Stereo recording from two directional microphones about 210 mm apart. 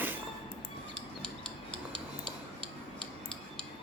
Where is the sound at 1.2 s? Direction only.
5° left (ahead or behind).